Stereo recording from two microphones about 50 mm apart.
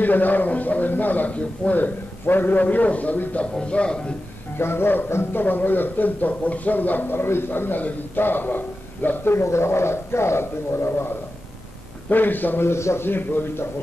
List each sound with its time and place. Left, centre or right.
0.0 s speech: left
3.5 s a man's voice: left
4.6 s speech: left
9.3 s speech: left
12.1 s speech: left
12.6 s speech: left
13.0 s a man's voice: left